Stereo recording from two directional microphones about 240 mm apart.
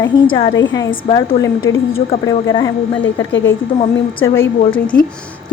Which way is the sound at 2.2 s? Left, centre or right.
Centre.